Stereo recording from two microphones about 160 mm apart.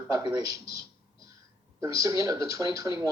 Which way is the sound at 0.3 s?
20° right (ahead or behind).